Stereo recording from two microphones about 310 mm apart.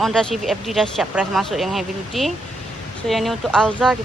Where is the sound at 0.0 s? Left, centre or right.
Centre.